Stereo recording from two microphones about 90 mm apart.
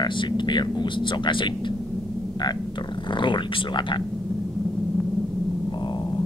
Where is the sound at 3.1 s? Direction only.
65° left (ahead or behind).